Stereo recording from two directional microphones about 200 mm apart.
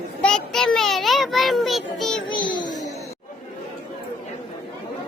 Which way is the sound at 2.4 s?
25° left (ahead or behind).